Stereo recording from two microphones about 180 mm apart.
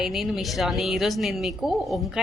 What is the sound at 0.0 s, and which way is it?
Speech, centre (ahead or behind).